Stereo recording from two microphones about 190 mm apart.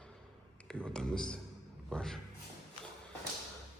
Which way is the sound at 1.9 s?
5° left (ahead or behind).